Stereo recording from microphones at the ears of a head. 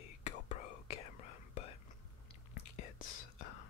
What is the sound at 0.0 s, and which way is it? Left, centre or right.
Whispering, left.